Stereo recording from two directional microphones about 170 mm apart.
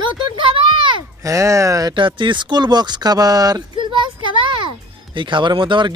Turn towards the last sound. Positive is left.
turn(degrees=-30)  # may be behind; listen again after turning